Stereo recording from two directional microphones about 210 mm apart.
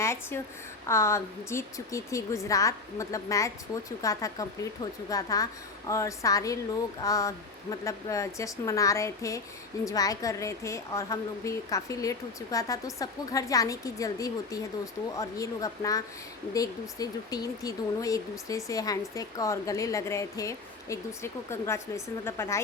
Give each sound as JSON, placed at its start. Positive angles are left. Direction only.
{"t": 0.0, "sound": "a woman's voice", "side_deg": 10}